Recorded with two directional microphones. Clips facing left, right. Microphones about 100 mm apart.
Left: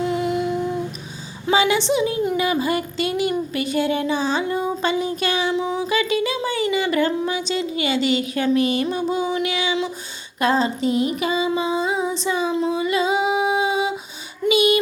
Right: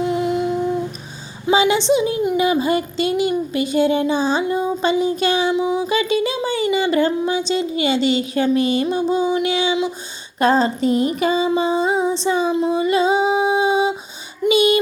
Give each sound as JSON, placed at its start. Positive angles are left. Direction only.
{"t": 0.0, "sound": "humming", "side_deg": -20}
{"t": 1.5, "sound": "a woman's voice", "side_deg": -20}
{"t": 2.3, "sound": "a sound", "side_deg": -25}
{"t": 5.5, "sound": "a sound", "side_deg": -15}
{"t": 10.4, "sound": "female singing", "side_deg": -35}
{"t": 12.7, "sound": "singing", "side_deg": -30}
{"t": 14.4, "sound": "a child's voice", "side_deg": -30}